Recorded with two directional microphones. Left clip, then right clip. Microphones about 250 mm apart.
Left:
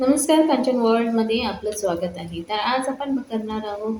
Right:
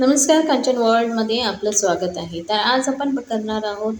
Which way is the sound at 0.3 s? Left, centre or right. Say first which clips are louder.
Right 2 dB; right.